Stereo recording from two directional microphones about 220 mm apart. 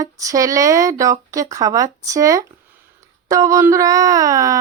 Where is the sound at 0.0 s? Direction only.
15° right (ahead or behind).